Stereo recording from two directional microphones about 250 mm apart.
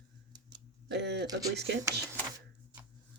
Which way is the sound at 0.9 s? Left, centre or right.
Right.